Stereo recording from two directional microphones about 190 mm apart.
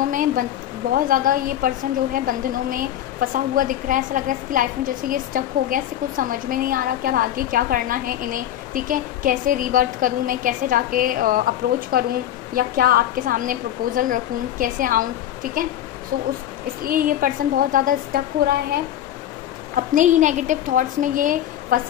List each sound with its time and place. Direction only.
0.1 s a woman's voice: 45° right (ahead or behind)
16.8 s a woman's voice: 50° right (ahead or behind)
19.9 s a woman's voice: 40° right (ahead or behind)